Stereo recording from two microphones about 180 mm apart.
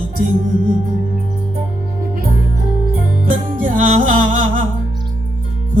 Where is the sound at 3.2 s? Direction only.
45° right (ahead or behind).